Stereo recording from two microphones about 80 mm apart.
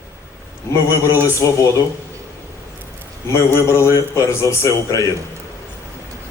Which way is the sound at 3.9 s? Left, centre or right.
Left.